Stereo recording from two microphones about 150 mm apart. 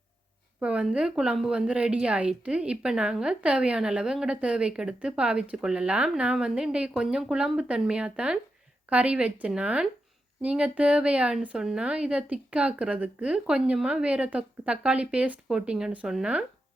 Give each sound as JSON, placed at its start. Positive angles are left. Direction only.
{"t": 0.6, "sound": "a woman's voice", "side_deg": -5}